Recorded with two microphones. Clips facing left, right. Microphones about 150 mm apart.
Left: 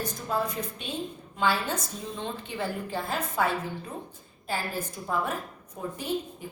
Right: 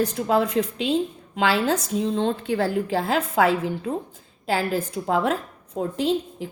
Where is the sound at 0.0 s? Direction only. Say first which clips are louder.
Right 9 dB; 70° right (ahead or behind).